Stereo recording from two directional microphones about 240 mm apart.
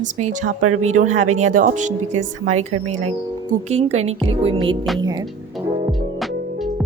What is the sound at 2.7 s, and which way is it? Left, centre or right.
Speech, right.